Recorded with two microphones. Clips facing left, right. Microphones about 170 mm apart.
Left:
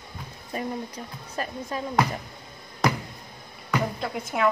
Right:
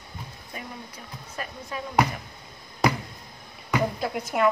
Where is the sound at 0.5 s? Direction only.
35° left (ahead or behind).